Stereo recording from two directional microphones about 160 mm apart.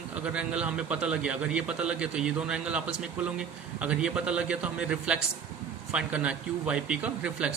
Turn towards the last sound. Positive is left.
turn(degrees=-5)  # may be behind; listen again after turning